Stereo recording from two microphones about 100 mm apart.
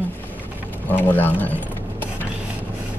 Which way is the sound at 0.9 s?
20° left (ahead or behind).